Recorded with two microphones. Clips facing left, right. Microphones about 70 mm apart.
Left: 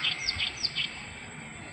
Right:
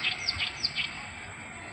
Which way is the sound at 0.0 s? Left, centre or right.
Right.